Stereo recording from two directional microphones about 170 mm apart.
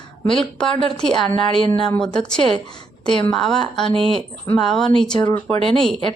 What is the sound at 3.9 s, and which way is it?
Speech, 35° right (ahead or behind).